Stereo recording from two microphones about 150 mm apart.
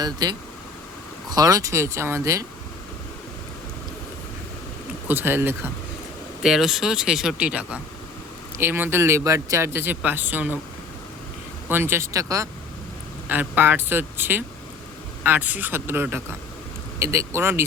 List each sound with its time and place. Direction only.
0.0 s speech: 25° right (ahead or behind)
5.0 s speech: 15° right (ahead or behind)
6.4 s speech: centre (ahead or behind)
11.7 s speech: 15° right (ahead or behind)